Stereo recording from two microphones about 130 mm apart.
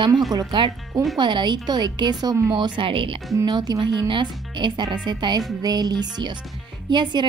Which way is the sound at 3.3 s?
30° right (ahead or behind).